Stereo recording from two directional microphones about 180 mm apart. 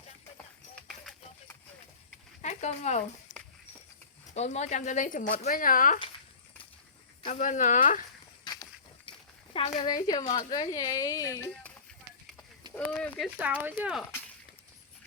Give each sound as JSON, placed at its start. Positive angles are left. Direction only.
{"t": 0.8, "sound": "a sound", "side_deg": 0}
{"t": 2.4, "sound": "speech", "side_deg": 40}
{"t": 4.4, "sound": "speech", "side_deg": 40}
{"t": 7.3, "sound": "speech", "side_deg": 45}
{"t": 9.0, "sound": "a sound", "side_deg": 30}
{"t": 9.7, "sound": "speech", "side_deg": 25}
{"t": 12.7, "sound": "speech", "side_deg": 10}
{"t": 13.2, "sound": "speech", "side_deg": -5}